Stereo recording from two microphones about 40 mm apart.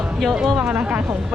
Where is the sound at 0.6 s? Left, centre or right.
Right.